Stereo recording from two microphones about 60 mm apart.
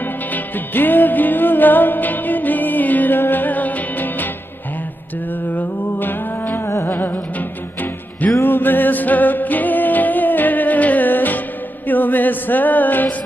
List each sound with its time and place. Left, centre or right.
0.3 s music: left
5.5 s music: left